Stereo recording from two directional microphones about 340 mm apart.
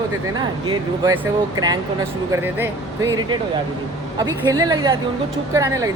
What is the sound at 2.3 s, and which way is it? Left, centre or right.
Speech, centre.